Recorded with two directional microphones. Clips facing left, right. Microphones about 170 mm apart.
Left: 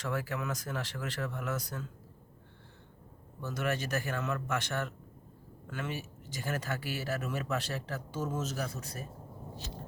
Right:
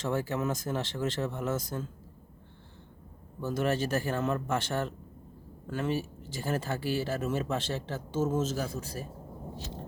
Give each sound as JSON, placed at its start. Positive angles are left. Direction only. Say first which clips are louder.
{"t": 0.0, "sound": "speech", "louder": "right 5 dB", "side_deg": -25}
{"t": 3.4, "sound": "speech", "louder": "right 5 dB", "side_deg": -30}